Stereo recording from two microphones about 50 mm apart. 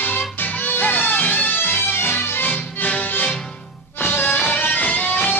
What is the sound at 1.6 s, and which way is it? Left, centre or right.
Music, left.